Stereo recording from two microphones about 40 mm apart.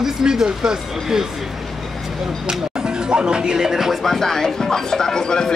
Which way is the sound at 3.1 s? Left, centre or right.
Right.